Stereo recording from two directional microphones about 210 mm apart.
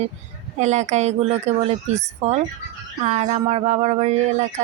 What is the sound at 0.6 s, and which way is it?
Speech, 35° right (ahead or behind).